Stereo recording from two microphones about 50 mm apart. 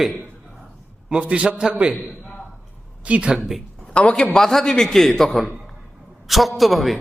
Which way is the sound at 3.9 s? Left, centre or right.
Left.